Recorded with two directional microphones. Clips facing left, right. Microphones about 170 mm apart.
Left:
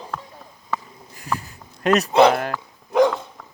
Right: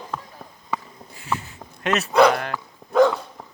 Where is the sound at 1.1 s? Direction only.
40° left (ahead or behind).